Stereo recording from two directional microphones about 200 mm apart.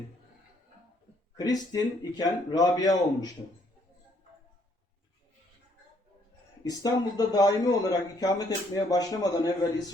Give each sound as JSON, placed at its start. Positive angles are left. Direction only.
{"t": 1.4, "sound": "speech", "side_deg": 20}
{"t": 6.7, "sound": "speech", "side_deg": 20}